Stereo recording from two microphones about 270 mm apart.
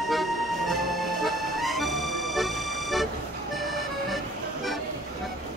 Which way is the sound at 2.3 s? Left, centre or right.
Centre.